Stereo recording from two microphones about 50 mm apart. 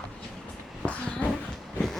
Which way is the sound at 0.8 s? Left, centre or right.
Left.